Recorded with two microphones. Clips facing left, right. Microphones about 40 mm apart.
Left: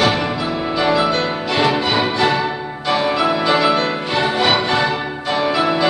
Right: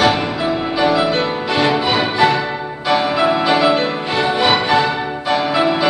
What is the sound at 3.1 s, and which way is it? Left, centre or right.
Music, centre.